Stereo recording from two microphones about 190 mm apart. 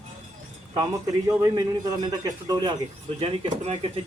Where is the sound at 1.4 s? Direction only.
20° right (ahead or behind).